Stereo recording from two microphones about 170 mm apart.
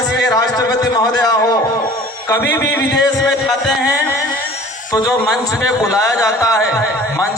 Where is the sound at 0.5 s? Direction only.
20° left (ahead or behind).